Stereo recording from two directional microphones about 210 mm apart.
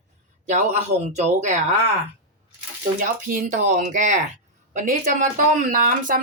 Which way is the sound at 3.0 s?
40° right (ahead or behind).